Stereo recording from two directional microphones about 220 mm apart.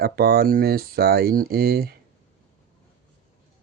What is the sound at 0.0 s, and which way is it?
Speech, 45° right (ahead or behind).